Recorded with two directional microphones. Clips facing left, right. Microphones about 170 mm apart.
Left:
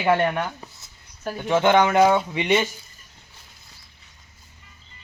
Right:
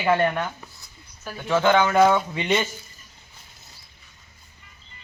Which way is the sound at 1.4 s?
20° left (ahead or behind).